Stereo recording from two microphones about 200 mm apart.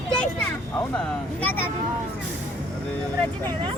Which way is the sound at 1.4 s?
10° left (ahead or behind).